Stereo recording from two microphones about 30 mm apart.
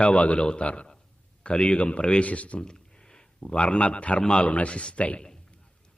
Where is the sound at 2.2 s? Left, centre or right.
Left.